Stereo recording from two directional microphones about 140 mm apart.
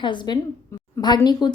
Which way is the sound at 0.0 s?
35° left (ahead or behind).